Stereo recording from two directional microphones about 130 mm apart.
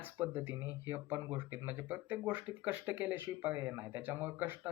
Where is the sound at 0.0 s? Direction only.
15° right (ahead or behind).